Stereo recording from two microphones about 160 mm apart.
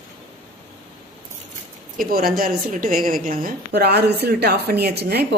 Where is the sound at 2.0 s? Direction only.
65° right (ahead or behind).